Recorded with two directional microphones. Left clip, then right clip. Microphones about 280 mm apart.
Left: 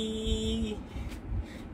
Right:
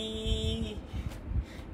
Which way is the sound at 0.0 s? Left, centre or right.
Centre.